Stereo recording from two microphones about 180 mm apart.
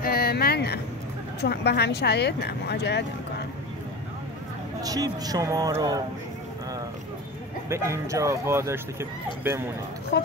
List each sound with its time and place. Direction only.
0.0 s a sound: 60° left (ahead or behind)
1.4 s speech: 65° left (ahead or behind)
4.8 s speech: 20° right (ahead or behind)
7.7 s speech: 15° right (ahead or behind)
10.1 s speech: 65° left (ahead or behind)